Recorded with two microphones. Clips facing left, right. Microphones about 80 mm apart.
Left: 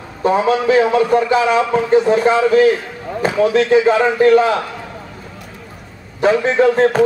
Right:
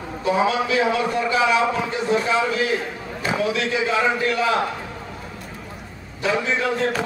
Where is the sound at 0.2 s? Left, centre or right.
Left.